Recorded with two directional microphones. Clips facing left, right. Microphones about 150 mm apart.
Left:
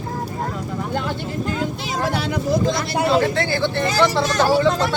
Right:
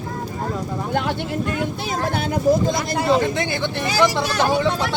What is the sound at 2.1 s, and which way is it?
Speech, 50° right (ahead or behind).